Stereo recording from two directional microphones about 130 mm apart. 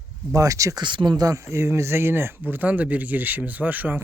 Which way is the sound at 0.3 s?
25° right (ahead or behind).